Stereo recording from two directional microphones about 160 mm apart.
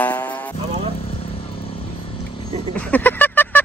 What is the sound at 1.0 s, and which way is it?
Vehicle, 35° left (ahead or behind).